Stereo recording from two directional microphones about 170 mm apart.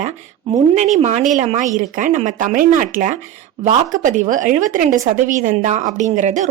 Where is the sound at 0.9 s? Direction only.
40° right (ahead or behind).